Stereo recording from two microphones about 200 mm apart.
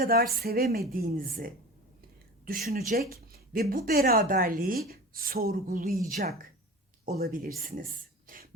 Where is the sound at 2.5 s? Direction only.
45° right (ahead or behind).